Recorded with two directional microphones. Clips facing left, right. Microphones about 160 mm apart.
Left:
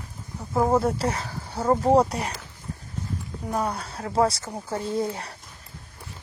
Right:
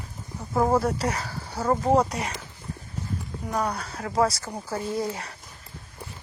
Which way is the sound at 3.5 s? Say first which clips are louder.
Left 1 dB; 5° left (ahead or behind).